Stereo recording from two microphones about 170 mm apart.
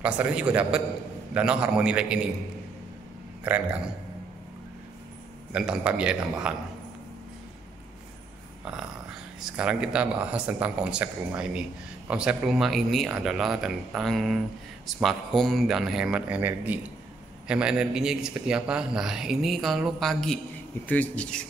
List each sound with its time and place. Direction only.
0.0 s a man's voice: 5° right (ahead or behind)
3.5 s speech: 5° right (ahead or behind)
5.5 s a man's voice: 5° right (ahead or behind)
9.4 s a man's voice: 5° right (ahead or behind)